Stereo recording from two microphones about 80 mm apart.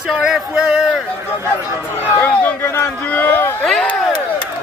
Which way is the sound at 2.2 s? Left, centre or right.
Left.